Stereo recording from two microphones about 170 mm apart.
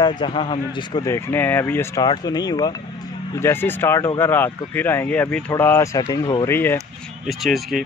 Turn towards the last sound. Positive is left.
turn(degrees=0)  # may be behind; listen again after turning